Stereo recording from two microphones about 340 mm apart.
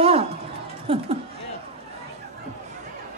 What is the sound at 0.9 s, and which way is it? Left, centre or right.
Speech, centre.